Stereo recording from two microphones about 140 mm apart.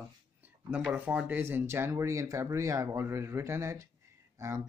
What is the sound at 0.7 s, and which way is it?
Speech, 10° right (ahead or behind).